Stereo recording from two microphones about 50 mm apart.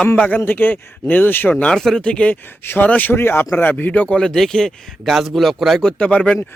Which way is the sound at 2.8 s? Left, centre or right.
Left.